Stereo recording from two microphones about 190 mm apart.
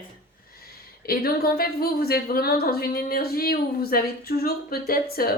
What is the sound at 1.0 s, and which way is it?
A woman's voice, 55° left (ahead or behind).